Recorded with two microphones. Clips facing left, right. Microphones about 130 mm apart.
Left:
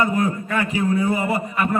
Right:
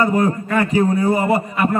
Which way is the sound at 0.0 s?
35° right (ahead or behind).